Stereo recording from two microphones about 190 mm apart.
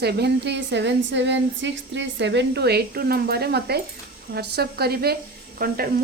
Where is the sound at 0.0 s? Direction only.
60° right (ahead or behind).